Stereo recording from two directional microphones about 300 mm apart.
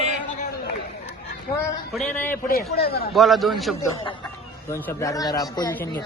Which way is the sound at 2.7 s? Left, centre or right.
Left.